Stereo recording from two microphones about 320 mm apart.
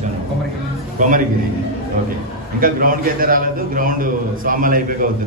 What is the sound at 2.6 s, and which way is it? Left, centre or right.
A man's voice, right.